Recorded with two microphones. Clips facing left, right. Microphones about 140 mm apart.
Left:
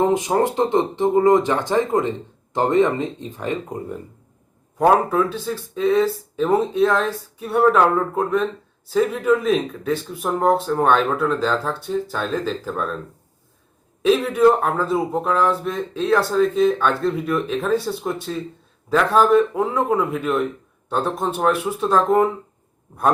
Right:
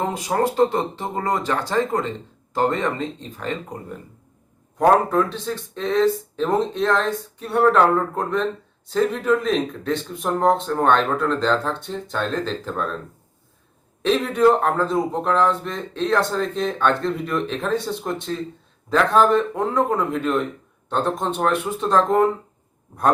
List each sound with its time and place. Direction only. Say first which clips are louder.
0.1 s speech: left 3 dB; 20° left (ahead or behind)
4.8 s speech: even; 5° left (ahead or behind)
14.0 s speech: left 2 dB; 5° left (ahead or behind)